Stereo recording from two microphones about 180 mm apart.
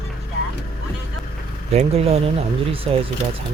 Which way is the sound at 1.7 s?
35° right (ahead or behind).